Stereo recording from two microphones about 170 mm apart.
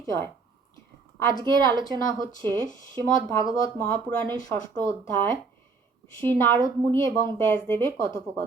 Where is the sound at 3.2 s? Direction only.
15° left (ahead or behind).